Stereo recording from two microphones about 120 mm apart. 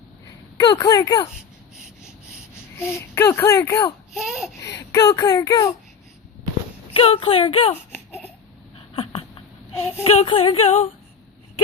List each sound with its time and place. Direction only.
0.5 s speech: 30° left (ahead or behind)
2.7 s speech: 20° left (ahead or behind)
4.1 s speech: 5° right (ahead or behind)
4.6 s speech: 25° left (ahead or behind)
6.9 s speech: 50° left (ahead or behind)
7.9 s baby cry: 15° left (ahead or behind)
10.0 s speech: 60° left (ahead or behind)
10.2 s speech: 50° left (ahead or behind)